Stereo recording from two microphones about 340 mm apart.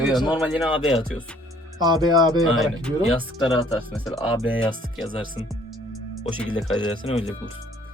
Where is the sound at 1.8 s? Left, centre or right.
Centre.